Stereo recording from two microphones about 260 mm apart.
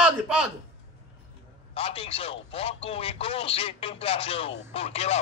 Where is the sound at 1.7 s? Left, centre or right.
Left.